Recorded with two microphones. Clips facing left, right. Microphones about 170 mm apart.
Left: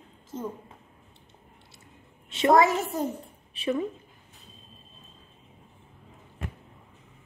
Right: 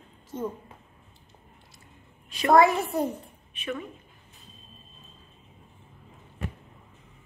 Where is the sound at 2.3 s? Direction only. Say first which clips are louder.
Right 1 dB; 25° left (ahead or behind).